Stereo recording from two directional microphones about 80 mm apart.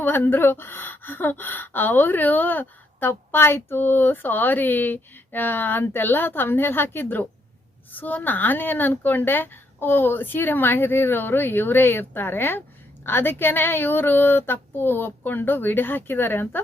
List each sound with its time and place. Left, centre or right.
0.0 s speech: left